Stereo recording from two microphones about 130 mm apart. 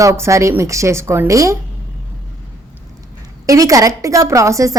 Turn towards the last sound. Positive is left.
turn(degrees=-25)  # may be behind; listen again after turning